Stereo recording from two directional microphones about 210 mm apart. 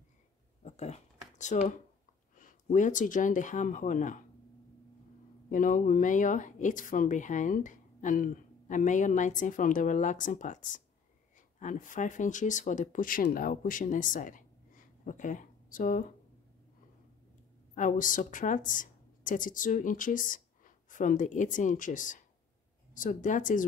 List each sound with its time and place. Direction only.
0.7 s a sound: 30° left (ahead or behind)
2.3 s speech: 40° left (ahead or behind)
5.5 s speech: 40° left (ahead or behind)
17.7 s a woman's voice: 40° left (ahead or behind)